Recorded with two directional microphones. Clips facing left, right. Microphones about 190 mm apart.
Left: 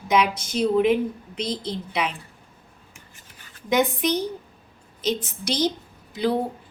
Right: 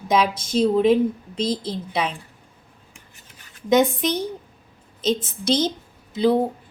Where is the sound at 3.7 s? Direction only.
25° right (ahead or behind).